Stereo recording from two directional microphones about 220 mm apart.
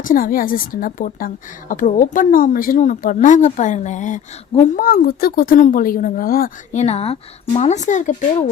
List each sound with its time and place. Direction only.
0.0 s a woman's voice: 40° left (ahead or behind)
6.8 s a woman's voice: 25° left (ahead or behind)